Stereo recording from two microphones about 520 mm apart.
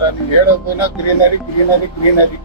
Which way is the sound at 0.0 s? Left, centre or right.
Left.